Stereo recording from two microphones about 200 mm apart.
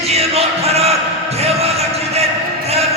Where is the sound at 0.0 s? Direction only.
30° right (ahead or behind).